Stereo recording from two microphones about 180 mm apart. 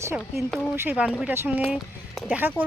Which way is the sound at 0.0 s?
15° right (ahead or behind).